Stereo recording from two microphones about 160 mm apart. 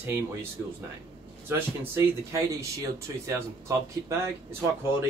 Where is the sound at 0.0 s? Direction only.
15° right (ahead or behind).